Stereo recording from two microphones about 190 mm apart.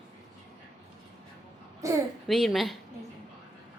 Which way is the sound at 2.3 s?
Centre (ahead or behind).